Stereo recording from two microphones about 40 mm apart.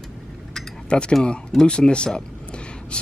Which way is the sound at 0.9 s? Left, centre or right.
Left.